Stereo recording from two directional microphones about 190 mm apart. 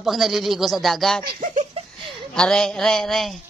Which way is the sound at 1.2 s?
45° right (ahead or behind).